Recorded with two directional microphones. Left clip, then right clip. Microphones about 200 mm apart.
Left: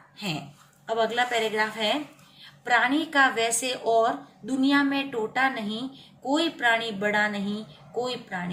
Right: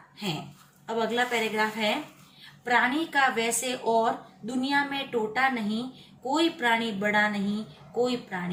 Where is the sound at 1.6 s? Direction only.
25° left (ahead or behind).